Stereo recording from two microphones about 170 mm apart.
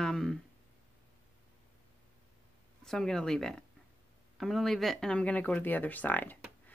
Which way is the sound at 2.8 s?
5° left (ahead or behind).